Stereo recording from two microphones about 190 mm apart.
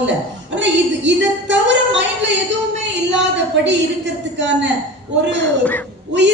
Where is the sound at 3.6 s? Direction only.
70° right (ahead or behind).